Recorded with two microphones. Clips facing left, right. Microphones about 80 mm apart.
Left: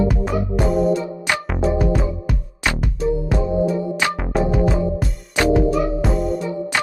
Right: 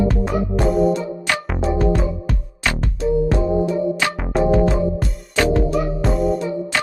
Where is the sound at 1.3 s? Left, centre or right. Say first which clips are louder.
Even; centre.